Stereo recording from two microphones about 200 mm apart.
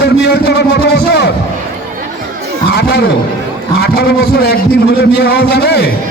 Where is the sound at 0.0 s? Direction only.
55° left (ahead or behind).